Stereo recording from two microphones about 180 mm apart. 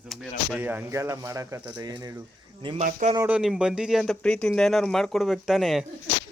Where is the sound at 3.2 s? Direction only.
10° right (ahead or behind).